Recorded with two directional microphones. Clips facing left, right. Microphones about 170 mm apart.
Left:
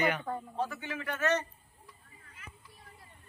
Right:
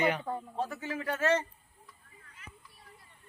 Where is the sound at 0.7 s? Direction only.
40° right (ahead or behind).